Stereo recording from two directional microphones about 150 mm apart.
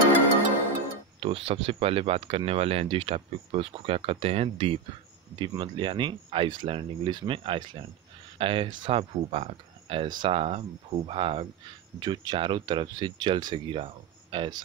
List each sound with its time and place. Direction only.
1.2 s speech: 40° right (ahead or behind)